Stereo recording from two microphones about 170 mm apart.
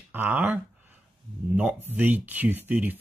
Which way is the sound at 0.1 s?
10° right (ahead or behind).